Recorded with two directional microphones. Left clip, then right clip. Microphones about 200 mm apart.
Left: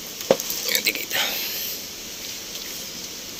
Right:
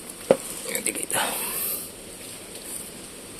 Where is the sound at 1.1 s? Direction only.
30° right (ahead or behind).